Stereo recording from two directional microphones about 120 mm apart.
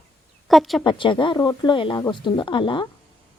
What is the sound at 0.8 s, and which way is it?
Speech, 40° left (ahead or behind).